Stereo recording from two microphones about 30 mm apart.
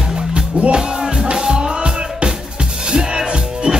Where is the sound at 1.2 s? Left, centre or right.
Right.